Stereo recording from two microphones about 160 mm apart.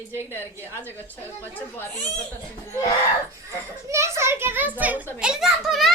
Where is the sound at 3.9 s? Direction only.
15° right (ahead or behind).